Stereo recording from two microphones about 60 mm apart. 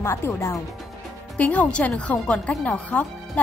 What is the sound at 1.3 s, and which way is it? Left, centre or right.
Speech, left.